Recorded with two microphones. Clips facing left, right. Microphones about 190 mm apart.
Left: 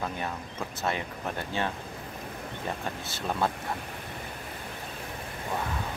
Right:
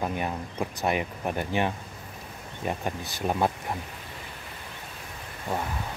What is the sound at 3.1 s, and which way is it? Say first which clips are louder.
Speech: right 3 dB; 15° right (ahead or behind).